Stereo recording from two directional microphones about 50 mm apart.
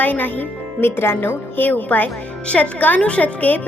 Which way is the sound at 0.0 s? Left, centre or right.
Left.